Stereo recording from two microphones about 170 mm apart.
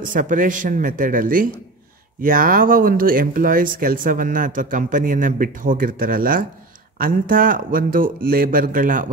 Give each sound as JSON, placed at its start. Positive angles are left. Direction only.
{"t": 0.1, "sound": "speech", "side_deg": -50}